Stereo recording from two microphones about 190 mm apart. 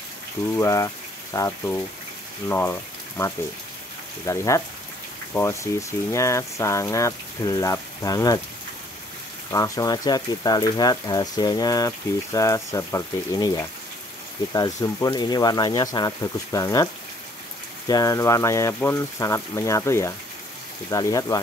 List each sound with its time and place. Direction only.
0.6 s speech: 15° left (ahead or behind)
9.5 s speech: 20° left (ahead or behind)